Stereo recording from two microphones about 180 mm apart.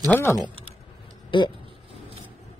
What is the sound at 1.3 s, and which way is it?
Speech, 25° left (ahead or behind).